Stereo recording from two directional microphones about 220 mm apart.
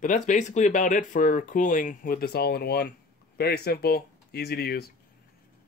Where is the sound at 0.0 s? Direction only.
35° left (ahead or behind).